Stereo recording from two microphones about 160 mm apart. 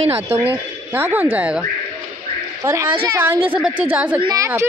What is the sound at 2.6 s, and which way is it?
A woman's voice, 15° right (ahead or behind).